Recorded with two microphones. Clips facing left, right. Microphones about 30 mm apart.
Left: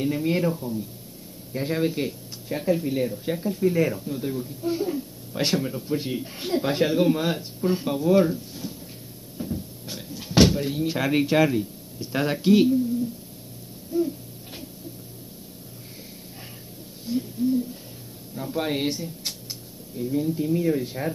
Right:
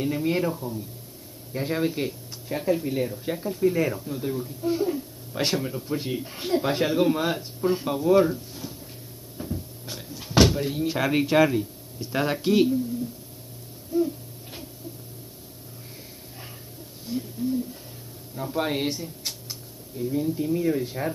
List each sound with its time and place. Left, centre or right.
0.0 s speech: centre
10.1 s a sound: centre
10.5 s speech: centre
13.9 s a sound: centre
17.4 s bird: left
18.3 s speech: centre
18.9 s speech: left
20.0 s speech: centre